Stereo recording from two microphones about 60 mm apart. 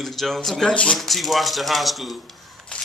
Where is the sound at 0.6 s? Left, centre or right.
Centre.